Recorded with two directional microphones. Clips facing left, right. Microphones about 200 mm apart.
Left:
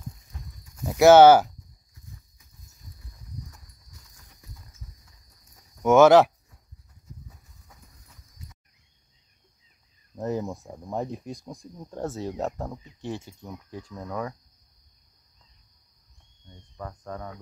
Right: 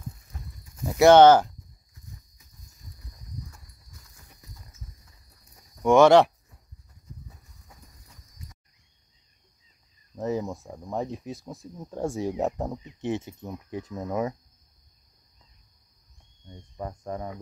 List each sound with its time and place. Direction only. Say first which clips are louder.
0.8 s speech: left 1 dB; centre (ahead or behind)
5.8 s speech: left 1 dB; 5° left (ahead or behind)
10.1 s speech: right 1 dB; centre (ahead or behind); by 14.3 s 20° right (ahead or behind)
16.4 s cricket: right 3 dB; 15° right (ahead or behind)